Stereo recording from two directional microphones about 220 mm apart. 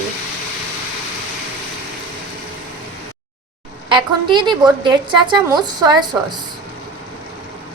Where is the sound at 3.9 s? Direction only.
20° right (ahead or behind).